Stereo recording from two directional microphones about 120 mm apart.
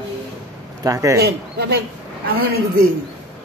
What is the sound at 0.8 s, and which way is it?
Speech, 25° right (ahead or behind).